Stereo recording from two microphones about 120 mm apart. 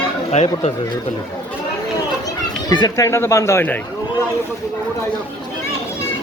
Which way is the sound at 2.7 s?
35° left (ahead or behind).